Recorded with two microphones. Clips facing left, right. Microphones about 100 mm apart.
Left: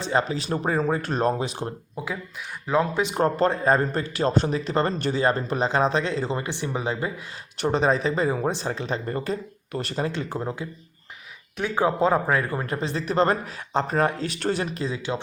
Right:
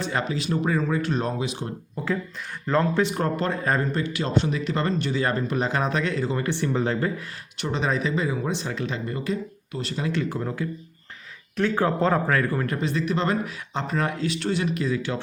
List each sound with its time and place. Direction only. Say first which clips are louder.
0.0 s speech: left 2 dB; 30° left (ahead or behind)
2.0 s speech: right 6 dB; 15° left (ahead or behind)
3.2 s speech: left 4 dB; 30° left (ahead or behind); by 7.1 s 15° left (ahead or behind)
7.6 s speech: left 4 dB; 40° left (ahead or behind)
9.7 s speech: left 1 dB; 50° left (ahead or behind)
10.1 s speech: right 2 dB; 25° left (ahead or behind)
11.5 s speech: right 1 dB; 10° left (ahead or behind)